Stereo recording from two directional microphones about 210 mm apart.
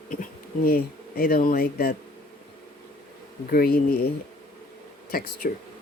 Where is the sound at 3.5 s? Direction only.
45° left (ahead or behind).